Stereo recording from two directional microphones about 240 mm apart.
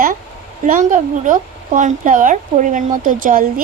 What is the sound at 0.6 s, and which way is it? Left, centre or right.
A woman's voice, right.